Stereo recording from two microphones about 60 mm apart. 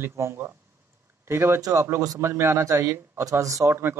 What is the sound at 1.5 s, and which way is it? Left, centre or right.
Speech, right.